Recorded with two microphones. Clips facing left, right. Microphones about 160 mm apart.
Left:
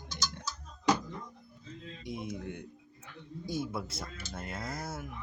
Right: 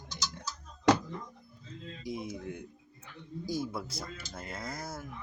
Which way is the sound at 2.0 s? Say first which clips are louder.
Right 1 dB; centre (ahead or behind).